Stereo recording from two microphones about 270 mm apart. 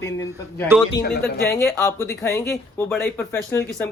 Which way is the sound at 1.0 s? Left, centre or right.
Left.